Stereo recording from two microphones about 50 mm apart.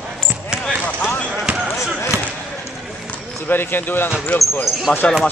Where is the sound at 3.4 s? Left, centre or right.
Left.